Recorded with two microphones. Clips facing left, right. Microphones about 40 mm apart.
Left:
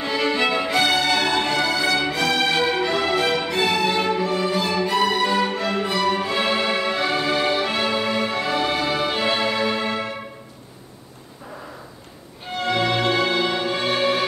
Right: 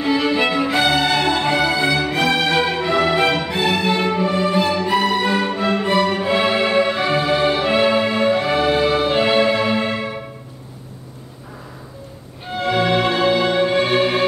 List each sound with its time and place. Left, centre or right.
0.0 s music: centre
0.7 s music: centre
3.1 s music: right
3.5 s music: centre
4.5 s music: right
4.9 s music: centre
9.3 s music: centre
12.5 s music: centre